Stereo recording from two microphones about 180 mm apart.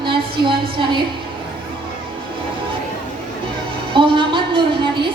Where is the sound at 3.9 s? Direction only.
30° right (ahead or behind).